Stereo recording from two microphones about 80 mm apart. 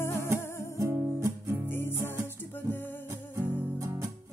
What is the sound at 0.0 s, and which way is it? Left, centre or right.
Music, left.